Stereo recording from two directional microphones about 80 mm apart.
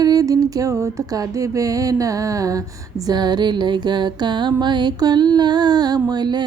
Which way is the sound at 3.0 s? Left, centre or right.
Right.